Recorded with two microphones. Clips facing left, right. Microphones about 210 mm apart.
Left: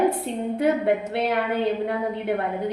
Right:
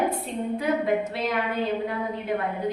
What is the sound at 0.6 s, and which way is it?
Speech, 65° left (ahead or behind).